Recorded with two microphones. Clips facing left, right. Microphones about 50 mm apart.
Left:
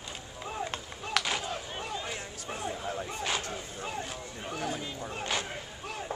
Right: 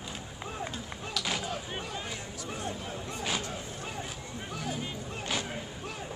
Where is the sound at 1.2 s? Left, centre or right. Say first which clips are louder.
Left 4 dB; left.